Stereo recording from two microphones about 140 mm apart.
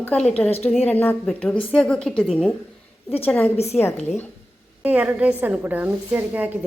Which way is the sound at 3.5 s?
50° left (ahead or behind).